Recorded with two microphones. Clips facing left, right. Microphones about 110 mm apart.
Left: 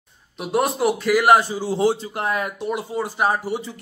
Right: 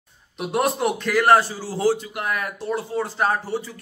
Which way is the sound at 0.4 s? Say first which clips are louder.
Left 1 dB; centre (ahead or behind).